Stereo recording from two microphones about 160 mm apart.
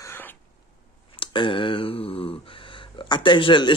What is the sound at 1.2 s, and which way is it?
Speech, 30° left (ahead or behind).